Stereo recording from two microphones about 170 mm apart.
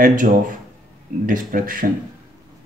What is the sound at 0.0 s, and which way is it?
Speech, 50° right (ahead or behind).